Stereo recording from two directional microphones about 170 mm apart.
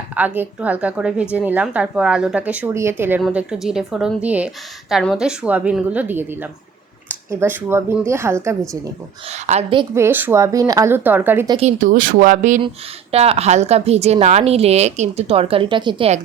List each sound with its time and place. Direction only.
0.3 s a woman's voice: 10° right (ahead or behind)
3.2 s a woman's voice: 5° right (ahead or behind)
9.3 s a woman's voice: 40° right (ahead or behind)
9.9 s a woman's voice: 15° right (ahead or behind)
11.4 s a woman's voice: 35° right (ahead or behind)
11.8 s speech: 55° right (ahead or behind)
12.6 s a woman's voice: 35° right (ahead or behind)